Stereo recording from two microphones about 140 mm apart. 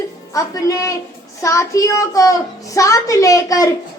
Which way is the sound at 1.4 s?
20° left (ahead or behind).